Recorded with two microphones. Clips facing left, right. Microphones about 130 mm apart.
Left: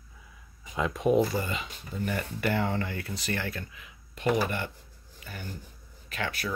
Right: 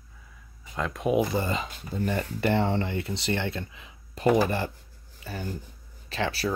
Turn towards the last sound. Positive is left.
turn(degrees=-30)  # may be behind; listen again after turning